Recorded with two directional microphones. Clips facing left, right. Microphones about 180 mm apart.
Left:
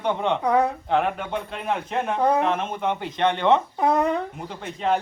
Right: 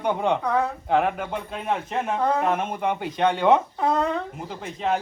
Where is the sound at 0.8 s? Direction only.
5° right (ahead or behind).